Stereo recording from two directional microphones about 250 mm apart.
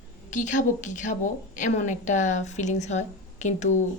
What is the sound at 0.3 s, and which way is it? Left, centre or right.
A woman's voice, left.